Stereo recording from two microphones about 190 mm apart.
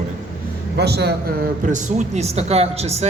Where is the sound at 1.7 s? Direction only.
40° right (ahead or behind).